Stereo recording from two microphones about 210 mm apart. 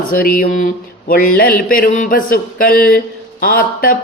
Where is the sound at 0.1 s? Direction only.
40° left (ahead or behind).